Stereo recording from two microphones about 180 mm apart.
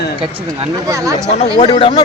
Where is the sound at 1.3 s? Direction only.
30° left (ahead or behind).